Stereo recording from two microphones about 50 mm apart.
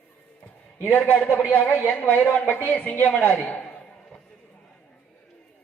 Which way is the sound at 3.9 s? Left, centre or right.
Centre.